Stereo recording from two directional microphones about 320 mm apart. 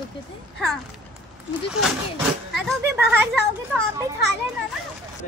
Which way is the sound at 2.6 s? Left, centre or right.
Centre.